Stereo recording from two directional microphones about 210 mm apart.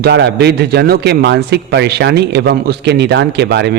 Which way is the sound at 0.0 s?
55° right (ahead or behind).